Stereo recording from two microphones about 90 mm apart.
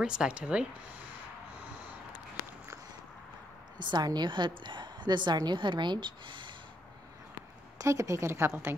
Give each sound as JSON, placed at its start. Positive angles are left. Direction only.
{"t": 0.0, "sound": "speech", "side_deg": -10}
{"t": 3.8, "sound": "a woman's voice", "side_deg": -55}
{"t": 7.8, "sound": "a woman's voice", "side_deg": -35}